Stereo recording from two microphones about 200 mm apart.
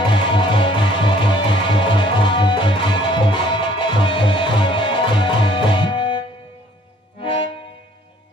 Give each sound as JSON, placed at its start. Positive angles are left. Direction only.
{"t": 0.1, "sound": "music", "side_deg": 25}